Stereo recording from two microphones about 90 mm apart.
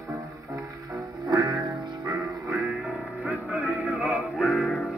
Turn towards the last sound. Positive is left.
turn(degrees=-10)  # may be behind; listen again after turning